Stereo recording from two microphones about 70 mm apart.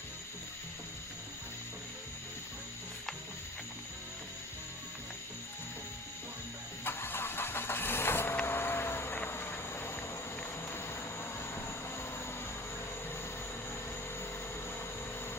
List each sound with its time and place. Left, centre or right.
6.8 s vehicle: left
10.7 s train: left